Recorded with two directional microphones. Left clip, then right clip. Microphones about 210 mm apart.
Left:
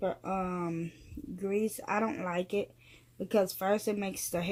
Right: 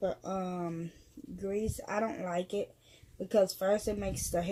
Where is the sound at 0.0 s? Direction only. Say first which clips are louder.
Left 1 dB; 25° left (ahead or behind).